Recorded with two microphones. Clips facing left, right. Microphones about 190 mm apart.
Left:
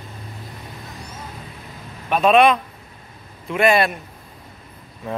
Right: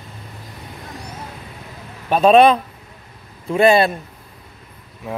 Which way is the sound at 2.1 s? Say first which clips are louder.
Right 3 dB; 35° right (ahead or behind).